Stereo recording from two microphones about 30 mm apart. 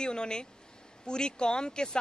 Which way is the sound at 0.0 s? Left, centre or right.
Left.